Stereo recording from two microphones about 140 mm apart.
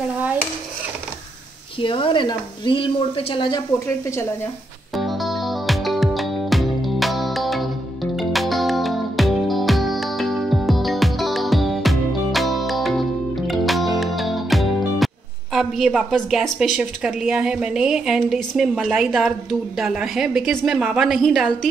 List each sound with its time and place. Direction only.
1.8 s speech: 40° left (ahead or behind)
4.9 s music: centre (ahead or behind)
15.5 s a woman's voice: centre (ahead or behind)